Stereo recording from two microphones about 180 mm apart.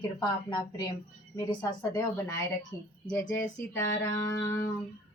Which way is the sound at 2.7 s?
15° left (ahead or behind).